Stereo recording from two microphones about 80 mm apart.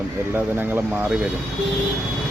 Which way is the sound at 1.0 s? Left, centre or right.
Centre.